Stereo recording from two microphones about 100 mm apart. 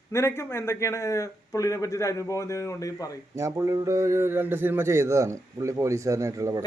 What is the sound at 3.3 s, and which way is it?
A man's voice, 30° right (ahead or behind).